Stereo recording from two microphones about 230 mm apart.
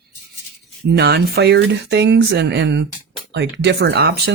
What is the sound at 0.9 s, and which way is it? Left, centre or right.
Speech, right.